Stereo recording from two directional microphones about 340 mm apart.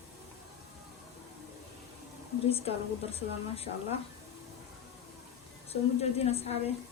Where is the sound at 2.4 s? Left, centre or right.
Centre.